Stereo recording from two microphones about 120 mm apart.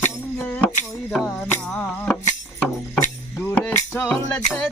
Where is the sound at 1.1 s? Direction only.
5° left (ahead or behind).